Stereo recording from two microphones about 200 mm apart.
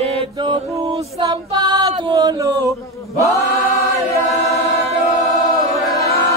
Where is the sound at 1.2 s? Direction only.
20° right (ahead or behind).